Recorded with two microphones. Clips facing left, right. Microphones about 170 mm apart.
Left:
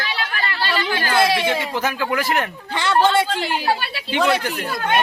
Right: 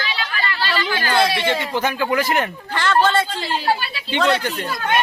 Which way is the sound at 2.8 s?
15° left (ahead or behind).